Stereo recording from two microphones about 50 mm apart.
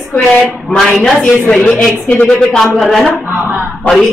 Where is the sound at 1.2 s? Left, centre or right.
Centre.